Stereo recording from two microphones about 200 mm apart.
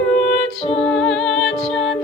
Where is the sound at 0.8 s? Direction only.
5° left (ahead or behind).